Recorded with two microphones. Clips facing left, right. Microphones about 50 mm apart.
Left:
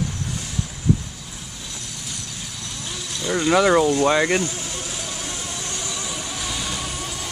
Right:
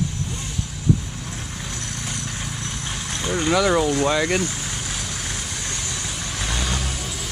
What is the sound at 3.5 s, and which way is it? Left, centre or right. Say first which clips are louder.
Speech: left 3 dB; centre.